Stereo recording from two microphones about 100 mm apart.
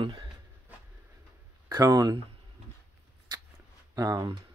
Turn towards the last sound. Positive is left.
turn(degrees=-40)  # may be behind; listen again after turning